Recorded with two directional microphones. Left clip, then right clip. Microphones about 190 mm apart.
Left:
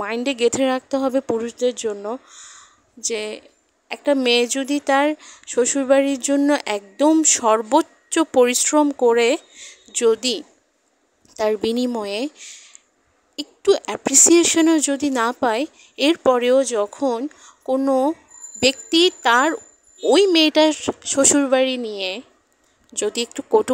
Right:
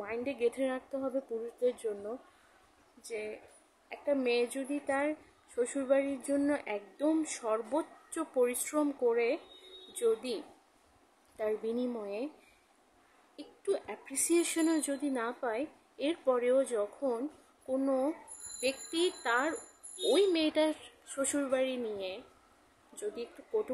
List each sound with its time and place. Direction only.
0.0 s speech: 55° left (ahead or behind)
13.4 s speech: 55° left (ahead or behind)
18.6 s speech: 60° left (ahead or behind)